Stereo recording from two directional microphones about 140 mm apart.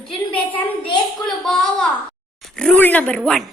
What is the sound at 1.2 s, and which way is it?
Speech, 5° left (ahead or behind).